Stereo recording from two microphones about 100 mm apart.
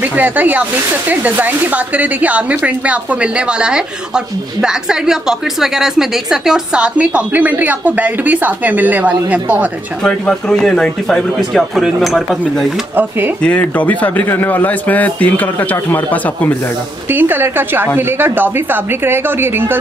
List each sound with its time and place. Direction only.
0.1 s speech: 15° right (ahead or behind)
10.0 s speech: 10° left (ahead or behind)
13.4 s a man's voice: 15° left (ahead or behind)
17.1 s a woman's voice: 20° right (ahead or behind)